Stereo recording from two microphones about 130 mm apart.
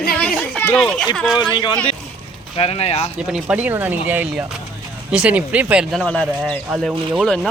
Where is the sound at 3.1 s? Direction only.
5° right (ahead or behind).